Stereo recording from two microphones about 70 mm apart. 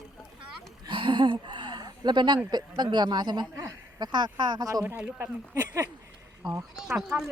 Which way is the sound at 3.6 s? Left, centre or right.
Right.